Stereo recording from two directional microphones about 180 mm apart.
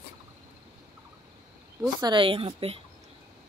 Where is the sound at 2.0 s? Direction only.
25° right (ahead or behind).